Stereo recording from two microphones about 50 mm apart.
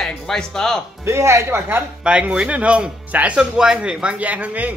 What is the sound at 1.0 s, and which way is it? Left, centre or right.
Speech, right.